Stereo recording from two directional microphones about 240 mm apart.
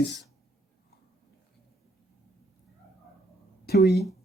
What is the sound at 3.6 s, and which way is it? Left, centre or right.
Speech, left.